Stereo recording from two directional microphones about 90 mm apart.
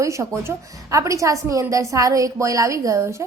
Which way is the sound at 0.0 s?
35° right (ahead or behind).